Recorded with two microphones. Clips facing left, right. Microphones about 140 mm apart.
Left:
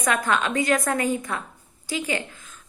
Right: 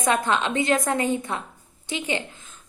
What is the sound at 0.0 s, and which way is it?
A woman's voice, 25° right (ahead or behind).